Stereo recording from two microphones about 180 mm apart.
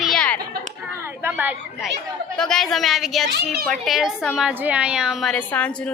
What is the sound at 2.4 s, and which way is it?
A woman's voice, 5° left (ahead or behind).